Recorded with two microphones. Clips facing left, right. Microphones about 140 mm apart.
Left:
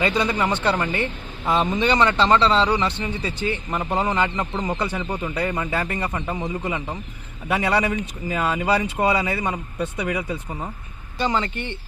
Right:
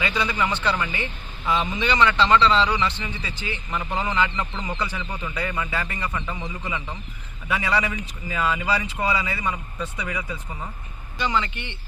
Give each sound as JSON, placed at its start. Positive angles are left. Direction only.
{"t": 0.0, "sound": "speech", "side_deg": 40}